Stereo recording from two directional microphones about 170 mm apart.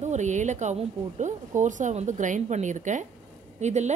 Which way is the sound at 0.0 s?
45° right (ahead or behind).